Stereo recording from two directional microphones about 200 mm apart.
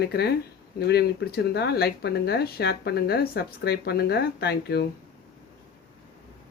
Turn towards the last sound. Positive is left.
turn(degrees=55)  # may be behind; listen again after turning